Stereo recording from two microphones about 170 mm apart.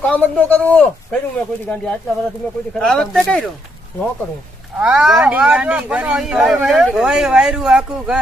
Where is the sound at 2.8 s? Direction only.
5° left (ahead or behind).